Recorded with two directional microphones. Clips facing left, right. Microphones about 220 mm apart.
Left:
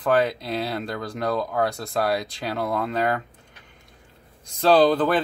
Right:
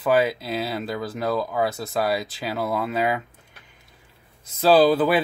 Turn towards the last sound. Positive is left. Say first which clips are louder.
# right 1 dB
turn(degrees=-5)  # may be behind; listen again after turning